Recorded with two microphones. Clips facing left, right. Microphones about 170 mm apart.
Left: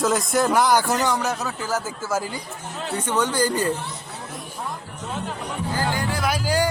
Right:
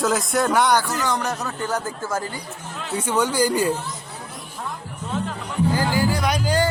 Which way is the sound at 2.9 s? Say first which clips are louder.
Right 2 dB; 10° right (ahead or behind).